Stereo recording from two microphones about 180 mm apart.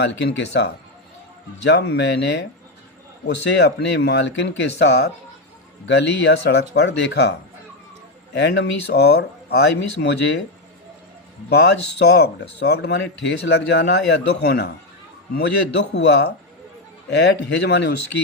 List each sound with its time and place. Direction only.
0.0 s speech: 75° left (ahead or behind)
11.9 s speech: 70° left (ahead or behind)